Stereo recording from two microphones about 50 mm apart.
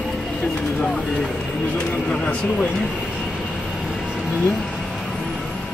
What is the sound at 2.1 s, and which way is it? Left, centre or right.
Speech, left.